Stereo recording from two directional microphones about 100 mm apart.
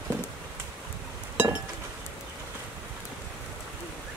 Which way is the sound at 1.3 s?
15° right (ahead or behind).